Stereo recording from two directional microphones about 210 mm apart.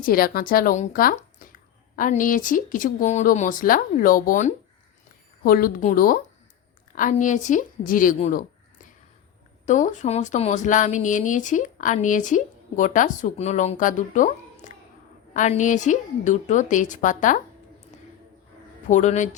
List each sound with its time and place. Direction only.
0.0 s speech: 45° left (ahead or behind)
9.6 s speech: 35° left (ahead or behind)
18.9 s speech: 35° left (ahead or behind)